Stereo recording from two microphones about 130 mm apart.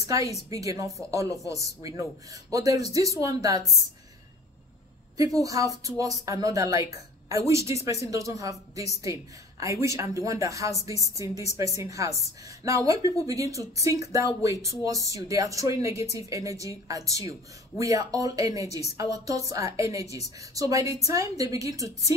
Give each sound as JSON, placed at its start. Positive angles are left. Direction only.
{"t": 0.0, "sound": "a woman's voice", "side_deg": -25}
{"t": 5.1, "sound": "speech", "side_deg": -25}